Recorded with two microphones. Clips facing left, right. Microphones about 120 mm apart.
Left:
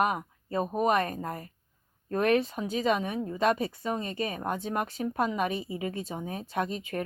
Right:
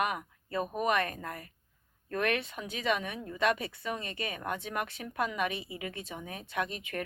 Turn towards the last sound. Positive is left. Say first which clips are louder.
# left 4 dB
turn(degrees=35)  # may be behind; listen again after turning